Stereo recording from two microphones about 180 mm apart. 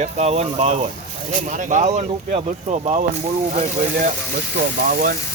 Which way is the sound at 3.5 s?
50° right (ahead or behind).